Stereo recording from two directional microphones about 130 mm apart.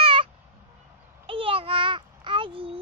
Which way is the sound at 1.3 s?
45° right (ahead or behind).